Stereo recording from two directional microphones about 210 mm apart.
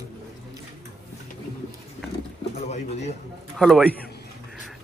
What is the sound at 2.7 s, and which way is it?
Pigeon, 30° left (ahead or behind).